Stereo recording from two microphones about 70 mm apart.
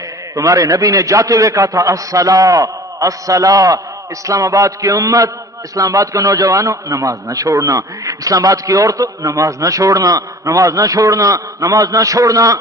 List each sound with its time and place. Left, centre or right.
0.3 s a man's voice: right